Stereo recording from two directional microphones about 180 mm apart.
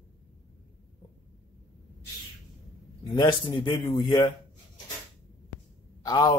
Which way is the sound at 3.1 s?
25° left (ahead or behind).